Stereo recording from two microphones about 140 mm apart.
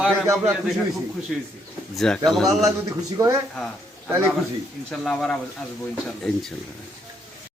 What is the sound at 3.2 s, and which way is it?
Speech, 20° right (ahead or behind).